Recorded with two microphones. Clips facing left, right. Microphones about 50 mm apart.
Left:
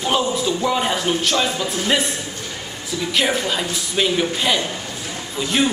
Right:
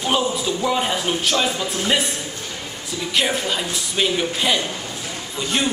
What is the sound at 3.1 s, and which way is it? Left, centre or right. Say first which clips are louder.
A man's voice: left 1 dB; centre.